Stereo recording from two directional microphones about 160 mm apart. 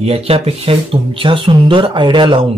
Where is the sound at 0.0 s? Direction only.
40° right (ahead or behind).